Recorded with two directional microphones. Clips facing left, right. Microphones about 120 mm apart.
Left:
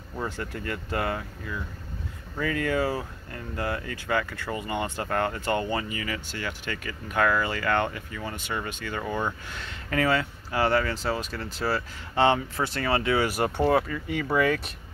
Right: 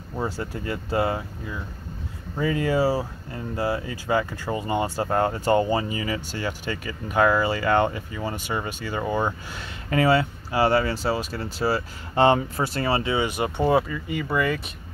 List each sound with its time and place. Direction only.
0.1 s speech: 25° right (ahead or behind)
6.6 s speech: 20° right (ahead or behind)
11.6 s speech: 15° right (ahead or behind)
12.2 s speech: 40° right (ahead or behind)
12.5 s speech: 10° right (ahead or behind)
12.9 s speech: 25° right (ahead or behind)
14.0 s speech: 5° right (ahead or behind)